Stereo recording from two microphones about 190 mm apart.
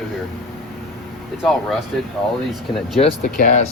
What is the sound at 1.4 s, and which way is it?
Speech, centre (ahead or behind).